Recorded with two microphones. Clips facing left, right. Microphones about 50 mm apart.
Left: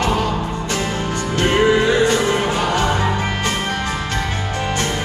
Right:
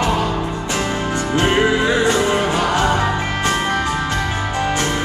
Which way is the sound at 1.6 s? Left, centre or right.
Centre.